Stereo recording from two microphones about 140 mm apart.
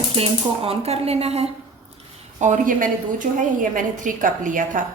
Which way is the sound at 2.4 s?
65° right (ahead or behind).